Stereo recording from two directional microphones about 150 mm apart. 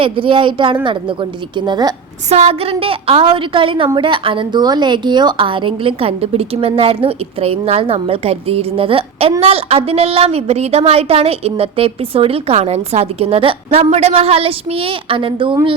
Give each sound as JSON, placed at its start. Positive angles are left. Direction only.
{"t": 0.0, "sound": "a woman's voice", "side_deg": -35}
{"t": 2.3, "sound": "a woman's voice", "side_deg": -40}